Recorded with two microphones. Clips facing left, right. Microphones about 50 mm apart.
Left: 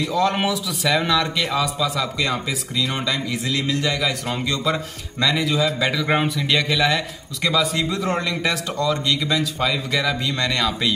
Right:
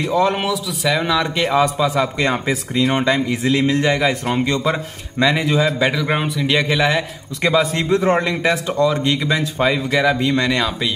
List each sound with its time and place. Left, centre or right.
0.0 s speech: right
0.4 s speech: centre
1.3 s a man's voice: right
6.0 s speech: centre
6.4 s speech: centre
7.4 s a man's voice: right; by 10.7 s centre